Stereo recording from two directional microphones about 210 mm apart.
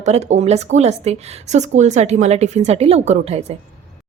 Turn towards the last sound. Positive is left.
turn(degrees=-30)  # may be behind; listen again after turning